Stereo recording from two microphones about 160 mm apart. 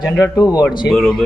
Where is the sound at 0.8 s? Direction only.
5° left (ahead or behind).